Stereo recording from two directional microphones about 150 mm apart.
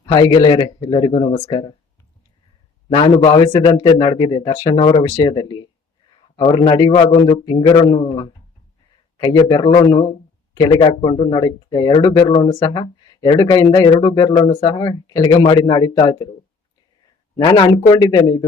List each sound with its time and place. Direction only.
0.1 s speech: 25° left (ahead or behind)
2.9 s speech: 30° left (ahead or behind)
17.3 s speech: 30° left (ahead or behind)